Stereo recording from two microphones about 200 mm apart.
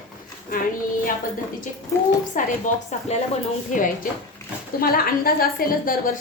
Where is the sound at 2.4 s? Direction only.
40° left (ahead or behind).